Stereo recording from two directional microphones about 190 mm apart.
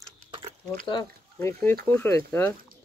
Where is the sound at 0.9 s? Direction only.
20° left (ahead or behind).